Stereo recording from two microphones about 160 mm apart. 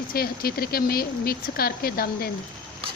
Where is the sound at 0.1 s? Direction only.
70° left (ahead or behind).